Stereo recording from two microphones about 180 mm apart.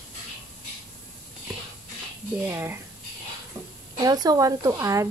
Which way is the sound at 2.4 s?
10° right (ahead or behind).